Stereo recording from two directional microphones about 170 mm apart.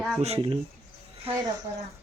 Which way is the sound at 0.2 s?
35° right (ahead or behind).